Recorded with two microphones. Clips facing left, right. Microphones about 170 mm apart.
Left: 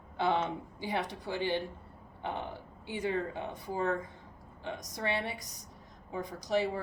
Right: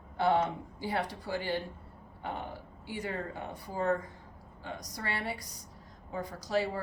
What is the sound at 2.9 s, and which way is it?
Speech, 20° left (ahead or behind).